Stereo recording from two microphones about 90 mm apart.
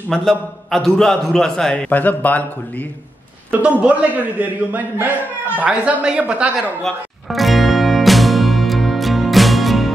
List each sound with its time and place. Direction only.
0.1 s a man's voice: centre (ahead or behind)
1.9 s speech: 20° left (ahead or behind)
3.5 s a man's voice: 15° right (ahead or behind)
6.8 s music: centre (ahead or behind)